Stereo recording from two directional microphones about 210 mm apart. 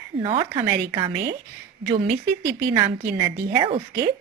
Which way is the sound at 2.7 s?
15° right (ahead or behind).